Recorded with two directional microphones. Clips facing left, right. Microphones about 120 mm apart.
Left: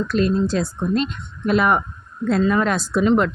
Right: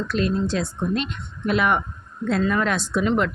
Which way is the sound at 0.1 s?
40° left (ahead or behind).